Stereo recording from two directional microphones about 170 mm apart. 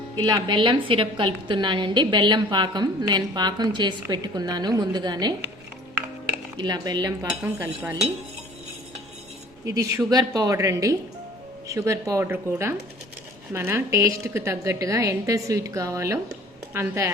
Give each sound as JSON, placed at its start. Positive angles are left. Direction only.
{"t": 0.2, "sound": "a woman's voice", "side_deg": -25}
{"t": 6.6, "sound": "a woman's voice", "side_deg": -25}
{"t": 7.4, "sound": "a woman's voice", "side_deg": -10}
{"t": 9.6, "sound": "a woman's voice", "side_deg": -20}